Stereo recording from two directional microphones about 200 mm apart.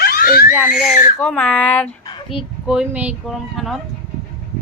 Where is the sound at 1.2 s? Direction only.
10° left (ahead or behind).